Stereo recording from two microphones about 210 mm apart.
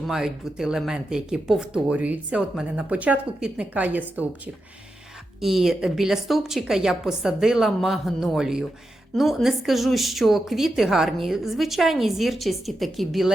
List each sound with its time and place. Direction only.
0.1 s speech: centre (ahead or behind)
5.4 s speech: centre (ahead or behind)